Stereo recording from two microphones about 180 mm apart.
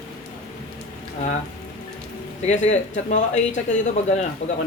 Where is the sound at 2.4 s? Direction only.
40° left (ahead or behind).